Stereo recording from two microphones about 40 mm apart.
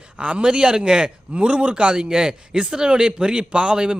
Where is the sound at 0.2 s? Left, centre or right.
Right.